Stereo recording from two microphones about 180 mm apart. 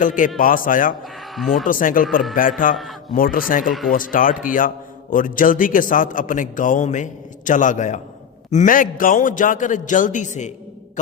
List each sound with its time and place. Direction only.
0.0 s a man's voice: 45° left (ahead or behind)
1.4 s speech: centre (ahead or behind)
1.6 s a man's voice: 50° left (ahead or behind)
3.7 s speech: centre (ahead or behind)
3.9 s a man's voice: 50° left (ahead or behind)